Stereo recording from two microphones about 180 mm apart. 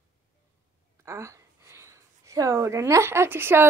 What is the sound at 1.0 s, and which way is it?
Speech, 15° right (ahead or behind).